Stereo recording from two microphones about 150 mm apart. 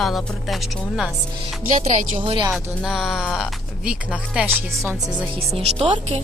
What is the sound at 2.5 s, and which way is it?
Speech, centre (ahead or behind).